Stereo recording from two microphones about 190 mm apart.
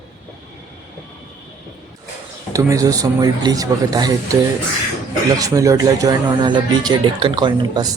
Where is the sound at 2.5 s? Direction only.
15° right (ahead or behind).